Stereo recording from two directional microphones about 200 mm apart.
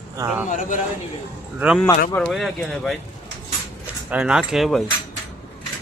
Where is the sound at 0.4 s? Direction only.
40° left (ahead or behind).